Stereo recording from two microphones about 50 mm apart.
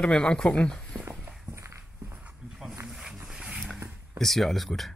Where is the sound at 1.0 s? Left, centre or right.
Right.